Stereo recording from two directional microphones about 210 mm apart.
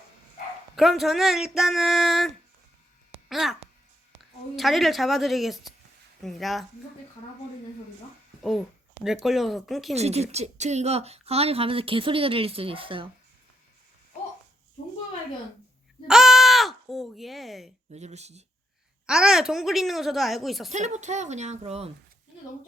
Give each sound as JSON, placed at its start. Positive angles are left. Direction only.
{"t": 0.8, "sound": "speech", "side_deg": 0}
{"t": 8.4, "sound": "a child's voice", "side_deg": 0}
{"t": 9.9, "sound": "a woman's voice", "side_deg": -30}
{"t": 16.0, "sound": "a sound", "side_deg": 0}
{"t": 17.9, "sound": "a woman's voice", "side_deg": -30}
{"t": 19.0, "sound": "speech", "side_deg": -5}
{"t": 20.7, "sound": "a woman's voice", "side_deg": -35}